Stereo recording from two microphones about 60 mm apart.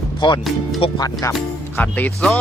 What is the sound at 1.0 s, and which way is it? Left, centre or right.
Speech, left.